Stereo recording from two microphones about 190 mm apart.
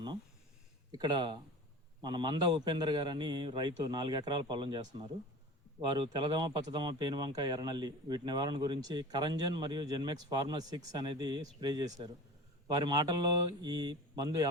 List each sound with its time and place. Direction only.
0.9 s speech: 20° right (ahead or behind)
6.0 s speech: 25° right (ahead or behind)